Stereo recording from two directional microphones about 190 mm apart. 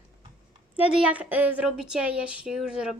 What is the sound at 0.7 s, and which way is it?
A woman's voice, 5° right (ahead or behind).